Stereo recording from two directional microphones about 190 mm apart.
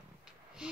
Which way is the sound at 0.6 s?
5° right (ahead or behind).